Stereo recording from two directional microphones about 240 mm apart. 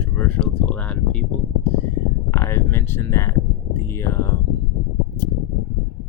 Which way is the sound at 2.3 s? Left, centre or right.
Centre.